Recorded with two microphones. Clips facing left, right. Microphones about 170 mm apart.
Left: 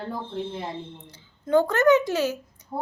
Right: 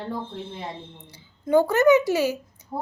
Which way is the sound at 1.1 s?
10° right (ahead or behind).